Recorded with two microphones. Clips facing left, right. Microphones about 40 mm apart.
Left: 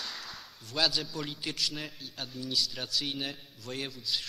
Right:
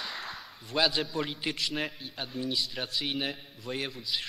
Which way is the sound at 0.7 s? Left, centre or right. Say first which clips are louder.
Right 3 dB; right.